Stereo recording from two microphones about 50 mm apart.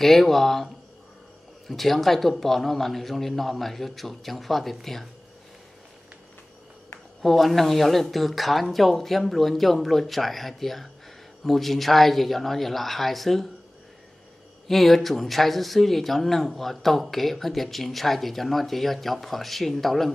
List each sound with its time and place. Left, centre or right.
0.0 s speech: centre
1.7 s speech: centre
7.2 s speech: centre
14.7 s speech: centre